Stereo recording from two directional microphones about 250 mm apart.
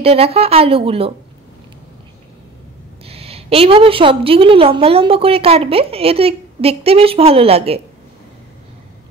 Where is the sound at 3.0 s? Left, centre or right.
Right.